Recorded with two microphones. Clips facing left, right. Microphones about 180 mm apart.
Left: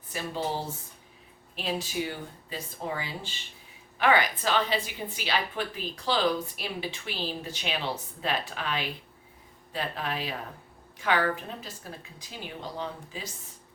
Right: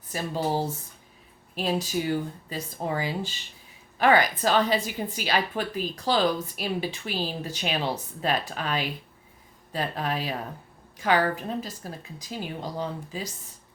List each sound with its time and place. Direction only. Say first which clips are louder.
0.1 s a woman's voice: right 4 dB; 40° right (ahead or behind)